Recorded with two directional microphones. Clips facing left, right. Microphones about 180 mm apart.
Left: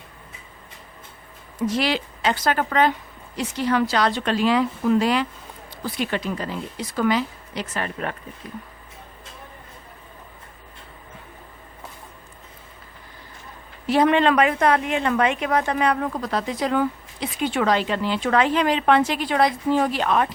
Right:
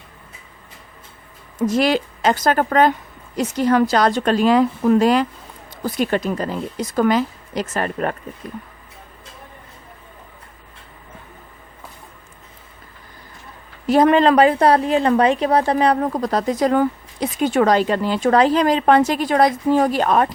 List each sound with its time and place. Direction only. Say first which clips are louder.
1.5 s speech: right 5 dB; 45° right (ahead or behind)
13.8 s a woman's voice: right 4 dB; 45° right (ahead or behind)